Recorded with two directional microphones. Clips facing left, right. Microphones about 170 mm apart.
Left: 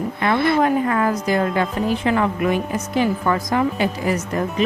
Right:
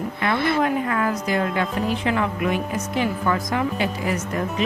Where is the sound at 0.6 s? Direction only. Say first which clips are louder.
Left 4 dB; 35° left (ahead or behind).